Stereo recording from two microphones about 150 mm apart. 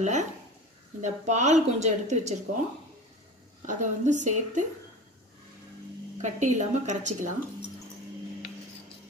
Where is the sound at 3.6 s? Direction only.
55° right (ahead or behind).